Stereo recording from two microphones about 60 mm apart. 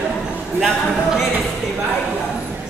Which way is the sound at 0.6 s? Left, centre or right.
Centre.